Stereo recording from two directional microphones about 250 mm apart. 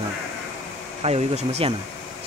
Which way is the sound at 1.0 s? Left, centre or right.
Right.